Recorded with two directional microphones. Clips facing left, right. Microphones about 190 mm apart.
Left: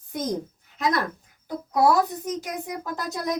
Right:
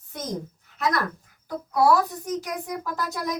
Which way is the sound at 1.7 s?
20° left (ahead or behind).